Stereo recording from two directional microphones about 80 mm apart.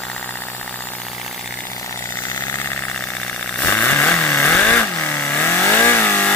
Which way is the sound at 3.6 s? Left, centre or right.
Centre.